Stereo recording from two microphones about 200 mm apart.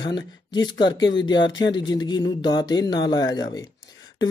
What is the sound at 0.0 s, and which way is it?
Speech, 20° left (ahead or behind).